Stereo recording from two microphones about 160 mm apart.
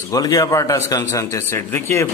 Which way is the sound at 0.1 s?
20° left (ahead or behind).